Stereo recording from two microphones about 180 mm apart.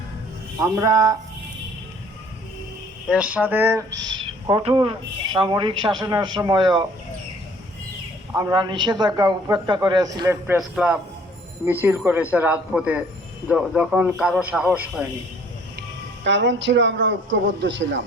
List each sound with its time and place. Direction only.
0.6 s a man's voice: 20° right (ahead or behind)
3.1 s speech: 5° right (ahead or behind)
3.9 s a sound: 90° right
4.4 s a man's voice: 25° right (ahead or behind)
8.4 s a man's voice: 20° right (ahead or behind)
10.4 s a man's voice: 10° right (ahead or behind)
16.2 s a man's voice: 90° right